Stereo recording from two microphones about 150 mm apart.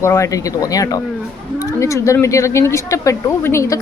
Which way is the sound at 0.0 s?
20° left (ahead or behind).